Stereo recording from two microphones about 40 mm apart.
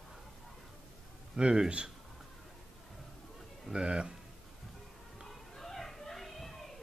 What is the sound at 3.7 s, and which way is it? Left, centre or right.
Speech, right.